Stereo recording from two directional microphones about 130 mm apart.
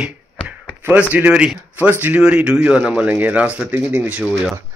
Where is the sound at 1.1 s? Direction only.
10° right (ahead or behind).